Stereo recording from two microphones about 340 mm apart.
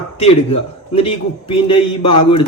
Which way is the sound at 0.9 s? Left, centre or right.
Centre.